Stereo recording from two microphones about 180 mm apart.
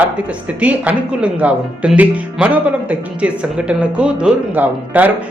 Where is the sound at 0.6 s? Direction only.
10° right (ahead or behind).